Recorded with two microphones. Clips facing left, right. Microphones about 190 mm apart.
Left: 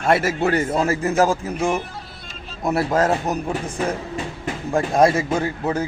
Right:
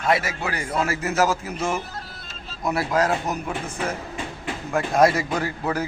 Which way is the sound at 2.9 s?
45° left (ahead or behind).